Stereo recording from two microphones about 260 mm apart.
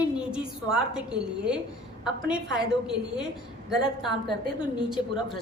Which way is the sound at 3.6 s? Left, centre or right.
Centre.